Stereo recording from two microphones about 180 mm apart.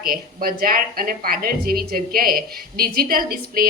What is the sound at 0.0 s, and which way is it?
Speech, 55° right (ahead or behind).